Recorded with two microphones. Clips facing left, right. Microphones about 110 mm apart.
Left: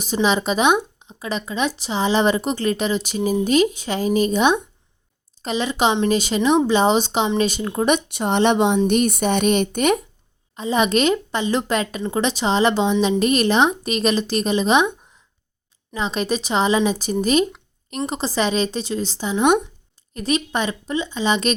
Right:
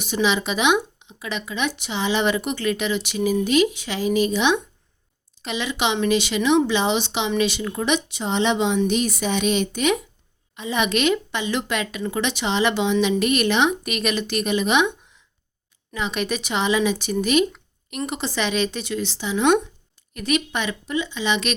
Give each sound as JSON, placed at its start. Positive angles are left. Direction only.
{"t": 0.0, "sound": "speech", "side_deg": 40}
{"t": 7.9, "sound": "a woman's voice", "side_deg": 55}
{"t": 10.5, "sound": "speech", "side_deg": 35}
{"t": 16.0, "sound": "speech", "side_deg": 35}
{"t": 19.3, "sound": "speech", "side_deg": 20}
{"t": 20.1, "sound": "speech", "side_deg": 35}